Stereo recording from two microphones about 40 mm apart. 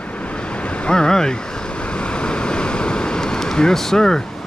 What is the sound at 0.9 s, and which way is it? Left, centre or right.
Speech, centre.